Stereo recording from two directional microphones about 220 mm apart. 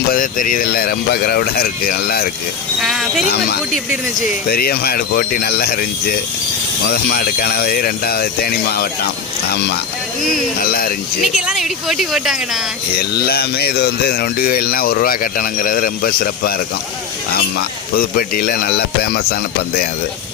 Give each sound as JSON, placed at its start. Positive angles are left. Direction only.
{"t": 0.1, "sound": "speech", "side_deg": 40}
{"t": 2.8, "sound": "speech", "side_deg": 0}
{"t": 4.4, "sound": "speech", "side_deg": 45}
{"t": 6.9, "sound": "speech", "side_deg": 45}
{"t": 10.6, "sound": "speech", "side_deg": 40}
{"t": 11.2, "sound": "speech", "side_deg": 0}
{"t": 13.0, "sound": "speech", "side_deg": 45}